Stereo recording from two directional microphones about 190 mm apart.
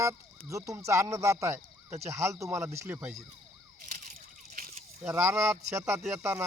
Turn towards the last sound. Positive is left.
turn(degrees=-15)  # may be behind; listen again after turning